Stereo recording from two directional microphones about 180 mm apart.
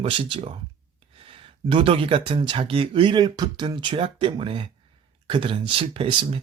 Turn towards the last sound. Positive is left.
turn(degrees=-30)  # may be behind; listen again after turning